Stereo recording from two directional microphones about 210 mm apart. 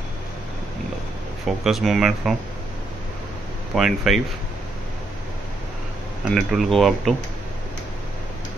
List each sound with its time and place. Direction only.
1.4 s speech: centre (ahead or behind)
3.7 s speech: centre (ahead or behind)
6.3 s speech: centre (ahead or behind)